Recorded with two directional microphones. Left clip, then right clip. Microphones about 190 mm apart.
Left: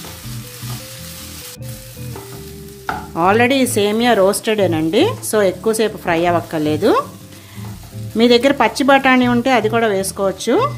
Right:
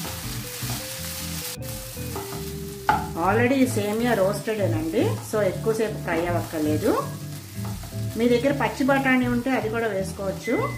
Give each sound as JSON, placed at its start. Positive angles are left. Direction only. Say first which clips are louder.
{"t": 3.2, "sound": "speech", "louder": "left 12 dB", "side_deg": 50}
{"t": 8.2, "sound": "speech", "louder": "left 9 dB", "side_deg": 60}